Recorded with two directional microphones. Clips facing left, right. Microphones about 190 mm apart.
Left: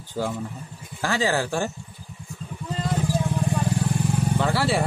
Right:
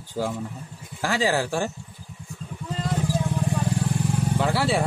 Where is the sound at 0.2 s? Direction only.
25° right (ahead or behind).